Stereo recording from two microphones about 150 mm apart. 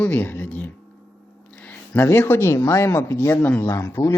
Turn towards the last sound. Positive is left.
turn(degrees=20)  # may be behind; listen again after turning